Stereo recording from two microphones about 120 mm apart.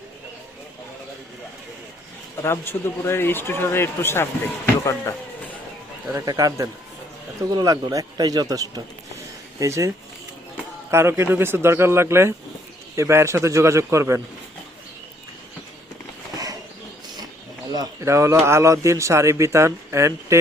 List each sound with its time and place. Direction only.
2.4 s a man's voice: 20° left (ahead or behind)
6.1 s speech: 30° right (ahead or behind)
10.9 s speech: 20° right (ahead or behind)
17.7 s speech: 25° right (ahead or behind)